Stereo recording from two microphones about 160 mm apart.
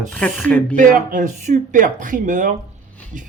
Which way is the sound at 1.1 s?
50° right (ahead or behind).